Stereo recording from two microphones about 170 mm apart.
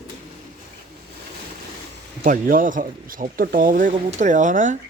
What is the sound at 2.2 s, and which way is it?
Speech, 55° right (ahead or behind).